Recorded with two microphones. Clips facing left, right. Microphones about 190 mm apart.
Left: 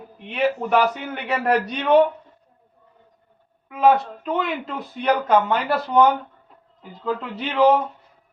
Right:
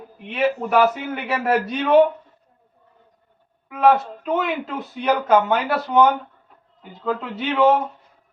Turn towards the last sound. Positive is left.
turn(degrees=0)  # may be behind; listen again after turning